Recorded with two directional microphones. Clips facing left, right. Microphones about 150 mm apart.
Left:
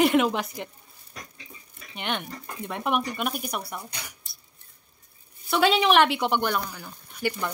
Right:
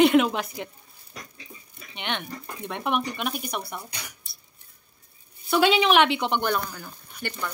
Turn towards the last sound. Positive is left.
turn(degrees=10)  # may be behind; listen again after turning